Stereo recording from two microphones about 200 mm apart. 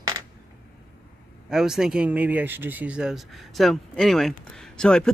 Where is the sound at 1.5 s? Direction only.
5° right (ahead or behind).